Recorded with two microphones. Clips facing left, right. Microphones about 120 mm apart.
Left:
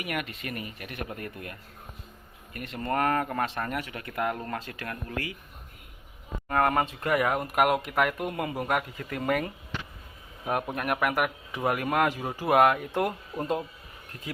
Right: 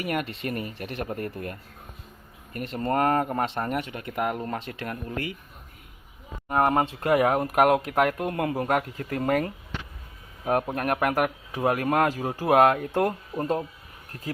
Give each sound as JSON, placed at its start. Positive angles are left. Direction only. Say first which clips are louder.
{"t": 0.0, "sound": "speech", "louder": "right 5 dB", "side_deg": -35}
{"t": 6.5, "sound": "speech", "louder": "right 2 dB", "side_deg": -25}
{"t": 10.8, "sound": "speech", "louder": "right 3 dB", "side_deg": -40}